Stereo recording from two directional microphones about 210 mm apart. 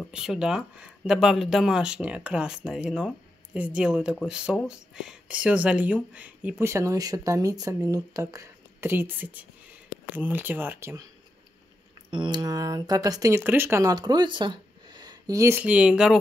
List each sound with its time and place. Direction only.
0.0 s speech: centre (ahead or behind)
12.1 s speech: 20° right (ahead or behind); by 16.2 s 5° right (ahead or behind)